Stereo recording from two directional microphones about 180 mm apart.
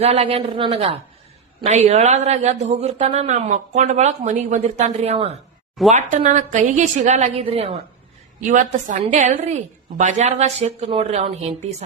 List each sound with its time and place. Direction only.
0.0 s a man's voice: 35° right (ahead or behind)
8.4 s a woman's voice: 45° right (ahead or behind)